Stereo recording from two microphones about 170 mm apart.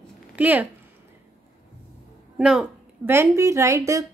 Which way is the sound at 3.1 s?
15° right (ahead or behind).